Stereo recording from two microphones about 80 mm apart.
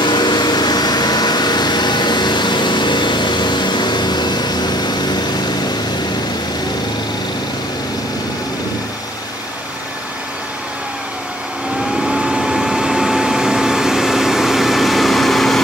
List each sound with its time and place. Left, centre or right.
0.0 s vehicle: left
12.0 s vehicle: centre